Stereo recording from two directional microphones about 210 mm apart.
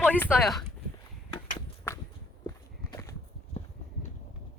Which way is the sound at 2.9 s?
15° left (ahead or behind).